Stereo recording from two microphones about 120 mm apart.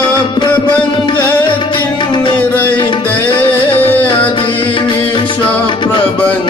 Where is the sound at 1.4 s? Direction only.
40° left (ahead or behind).